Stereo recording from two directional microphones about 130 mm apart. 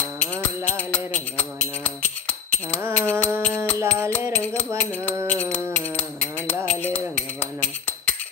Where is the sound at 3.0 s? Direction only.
10° left (ahead or behind).